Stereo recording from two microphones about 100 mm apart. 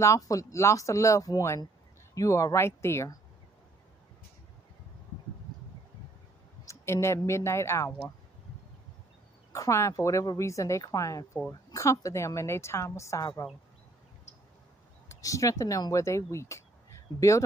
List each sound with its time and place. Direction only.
0.0 s a woman's voice: 35° left (ahead or behind)
6.6 s speech: 30° left (ahead or behind)
9.5 s a woman's voice: 30° left (ahead or behind)
15.0 s a woman's voice: 35° left (ahead or behind)
17.1 s speech: 45° left (ahead or behind)